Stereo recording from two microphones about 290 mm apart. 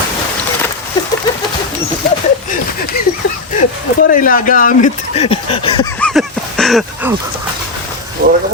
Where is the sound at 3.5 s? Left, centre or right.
Left.